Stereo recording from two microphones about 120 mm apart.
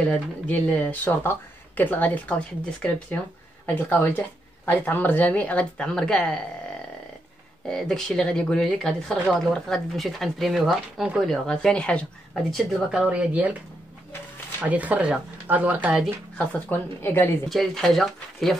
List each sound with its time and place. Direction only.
0.1 s speech: 10° left (ahead or behind)
3.6 s speech: 15° left (ahead or behind); by 13.6 s 10° right (ahead or behind)
14.6 s speech: 10° right (ahead or behind)
16.3 s speech: 15° left (ahead or behind)
17.5 s speech: centre (ahead or behind)